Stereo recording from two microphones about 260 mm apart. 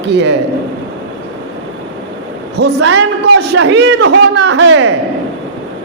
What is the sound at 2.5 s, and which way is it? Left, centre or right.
A man's voice, right.